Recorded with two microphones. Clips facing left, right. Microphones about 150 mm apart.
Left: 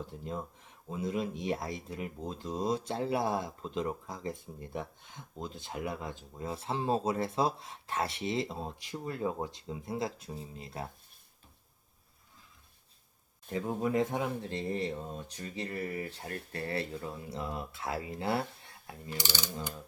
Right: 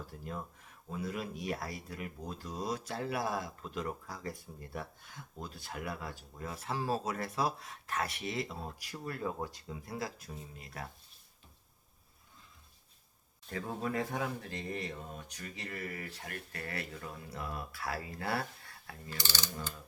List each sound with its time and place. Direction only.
0.0 s speech: 20° left (ahead or behind)
13.5 s speech: 20° left (ahead or behind)